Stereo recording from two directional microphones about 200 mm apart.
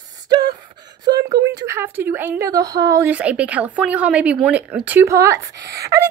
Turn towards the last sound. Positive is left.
turn(degrees=-15)  # may be behind; listen again after turning